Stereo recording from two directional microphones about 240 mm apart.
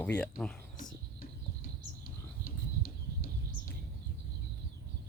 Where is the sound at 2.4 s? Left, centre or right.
Left.